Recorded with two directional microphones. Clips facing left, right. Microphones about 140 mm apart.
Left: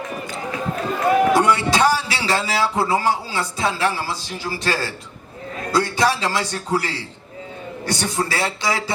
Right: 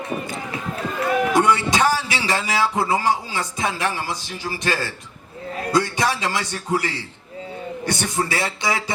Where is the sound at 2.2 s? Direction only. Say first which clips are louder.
Left 1 dB; 15° right (ahead or behind).